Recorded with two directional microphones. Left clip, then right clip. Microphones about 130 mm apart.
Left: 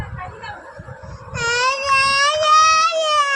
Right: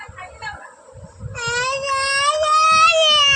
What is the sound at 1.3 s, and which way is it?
Baby cry, 85° left.